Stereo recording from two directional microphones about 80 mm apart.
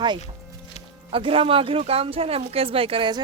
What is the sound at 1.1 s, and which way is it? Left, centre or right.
Speech, right.